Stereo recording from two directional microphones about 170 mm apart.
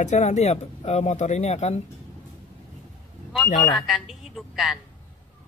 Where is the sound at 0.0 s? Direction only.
45° left (ahead or behind).